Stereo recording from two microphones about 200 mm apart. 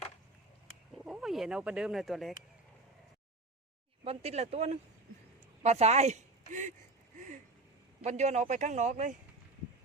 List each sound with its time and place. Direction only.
1.0 s speech: centre (ahead or behind)
4.0 s speech: 30° right (ahead or behind)
8.0 s speech: 35° right (ahead or behind)